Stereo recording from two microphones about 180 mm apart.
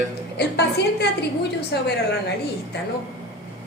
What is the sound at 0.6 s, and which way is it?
Speech, 65° left (ahead or behind).